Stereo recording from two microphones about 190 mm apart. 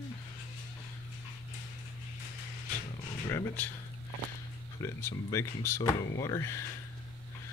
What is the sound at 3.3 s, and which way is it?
Speech, 10° left (ahead or behind).